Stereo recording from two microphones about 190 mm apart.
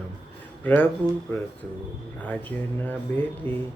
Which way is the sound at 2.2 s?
10° left (ahead or behind).